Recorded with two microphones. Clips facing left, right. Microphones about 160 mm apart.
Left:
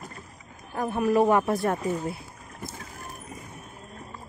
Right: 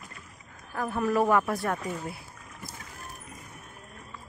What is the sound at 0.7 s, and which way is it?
A woman's voice, 20° left (ahead or behind).